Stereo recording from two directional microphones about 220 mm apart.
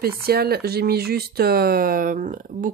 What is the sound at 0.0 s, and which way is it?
Speech, 45° right (ahead or behind).